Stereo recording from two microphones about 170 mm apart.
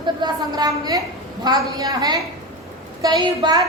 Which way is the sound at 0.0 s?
25° right (ahead or behind).